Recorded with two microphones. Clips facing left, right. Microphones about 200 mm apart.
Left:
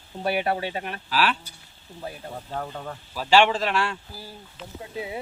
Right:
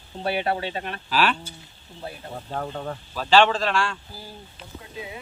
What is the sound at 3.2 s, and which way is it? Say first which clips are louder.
Speech: right 1 dB; 10° left (ahead or behind).